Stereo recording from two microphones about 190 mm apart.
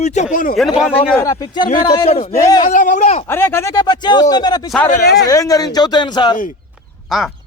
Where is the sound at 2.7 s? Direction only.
40° left (ahead or behind).